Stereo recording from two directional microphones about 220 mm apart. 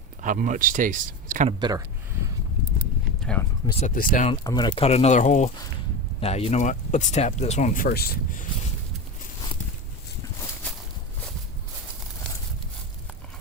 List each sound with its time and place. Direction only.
0.2 s speech: 35° right (ahead or behind)
1.5 s speech: 20° right (ahead or behind)
3.2 s a sound: 5° left (ahead or behind)
3.7 s speech: 30° left (ahead or behind)
4.3 s speech: 20° left (ahead or behind); by 8.4 s 40° left (ahead or behind)